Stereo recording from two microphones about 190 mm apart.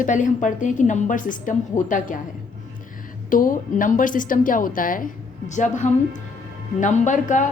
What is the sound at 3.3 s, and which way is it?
A woman's voice, 45° left (ahead or behind).